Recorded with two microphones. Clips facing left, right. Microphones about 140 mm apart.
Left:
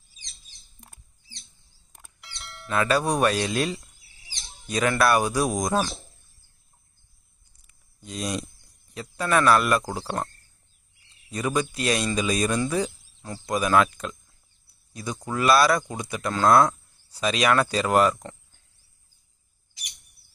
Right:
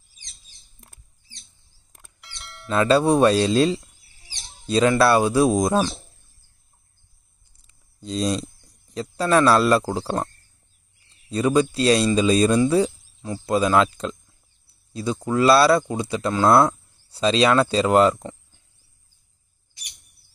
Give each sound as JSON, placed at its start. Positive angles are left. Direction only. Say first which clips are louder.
{"t": 2.1, "sound": "music", "louder": "even", "side_deg": 0}
{"t": 2.7, "sound": "speech", "louder": "right 6 dB", "side_deg": -25}
{"t": 7.6, "sound": "a sound", "louder": "right 9 dB", "side_deg": -30}
{"t": 8.9, "sound": "speech", "louder": "right 5 dB", "side_deg": -30}
{"t": 11.2, "sound": "speech", "louder": "right 7 dB", "side_deg": -30}